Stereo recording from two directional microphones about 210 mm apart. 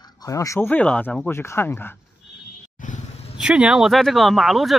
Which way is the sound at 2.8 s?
35° left (ahead or behind).